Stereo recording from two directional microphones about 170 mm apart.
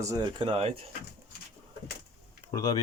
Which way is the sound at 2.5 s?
20° left (ahead or behind).